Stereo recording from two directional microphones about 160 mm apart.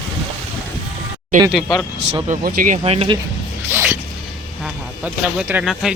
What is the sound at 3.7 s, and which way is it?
Music, 15° right (ahead or behind).